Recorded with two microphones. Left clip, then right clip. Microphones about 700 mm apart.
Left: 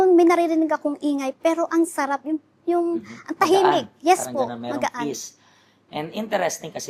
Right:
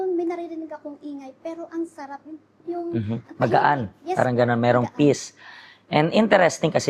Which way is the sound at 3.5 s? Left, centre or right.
Right.